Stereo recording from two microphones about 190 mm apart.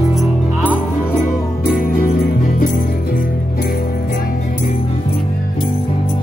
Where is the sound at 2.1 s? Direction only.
45° left (ahead or behind).